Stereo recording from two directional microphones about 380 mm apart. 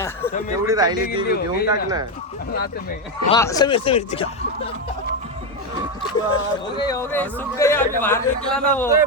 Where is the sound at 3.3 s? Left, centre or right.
Centre.